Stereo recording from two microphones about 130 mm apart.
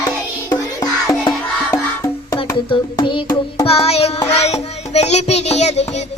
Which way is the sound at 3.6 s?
50° left (ahead or behind).